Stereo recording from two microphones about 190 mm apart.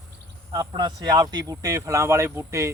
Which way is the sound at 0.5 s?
20° right (ahead or behind).